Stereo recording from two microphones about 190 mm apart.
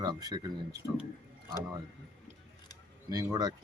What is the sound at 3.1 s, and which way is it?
Speech, 20° right (ahead or behind).